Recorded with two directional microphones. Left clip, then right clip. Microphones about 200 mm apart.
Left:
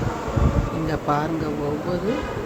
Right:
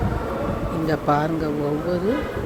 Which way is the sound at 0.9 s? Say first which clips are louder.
Right 3 dB; 15° right (ahead or behind).